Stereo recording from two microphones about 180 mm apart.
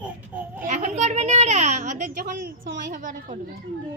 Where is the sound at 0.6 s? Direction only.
45° right (ahead or behind).